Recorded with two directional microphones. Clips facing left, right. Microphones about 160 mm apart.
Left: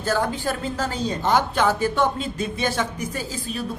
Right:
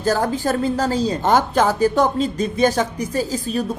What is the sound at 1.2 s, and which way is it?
A woman's voice, 45° right (ahead or behind).